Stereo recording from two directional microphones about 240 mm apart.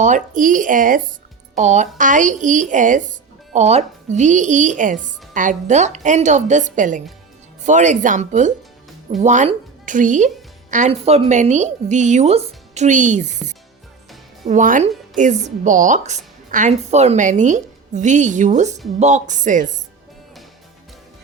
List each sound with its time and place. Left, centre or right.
0.0 s speech: right
14.4 s a woman's voice: right